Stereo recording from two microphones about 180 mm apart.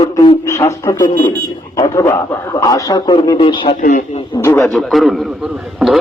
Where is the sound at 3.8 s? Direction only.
50° left (ahead or behind).